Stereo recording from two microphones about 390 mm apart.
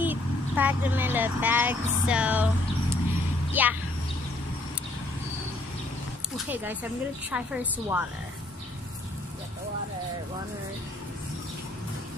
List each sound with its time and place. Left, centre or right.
0.0 s a woman's voice: centre
6.3 s a woman's voice: centre